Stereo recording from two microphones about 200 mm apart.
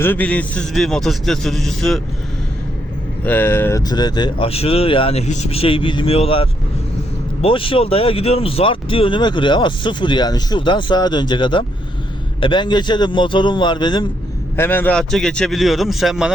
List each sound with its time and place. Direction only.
0.0 s a man's voice: 10° left (ahead or behind)
3.2 s speech: 10° left (ahead or behind)
14.5 s a man's voice: 10° left (ahead or behind)